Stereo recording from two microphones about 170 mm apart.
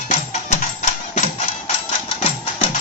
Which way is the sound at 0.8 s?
45° left (ahead or behind).